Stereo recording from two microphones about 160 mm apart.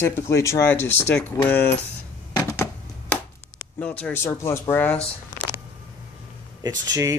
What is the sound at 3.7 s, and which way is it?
Speech, 10° left (ahead or behind).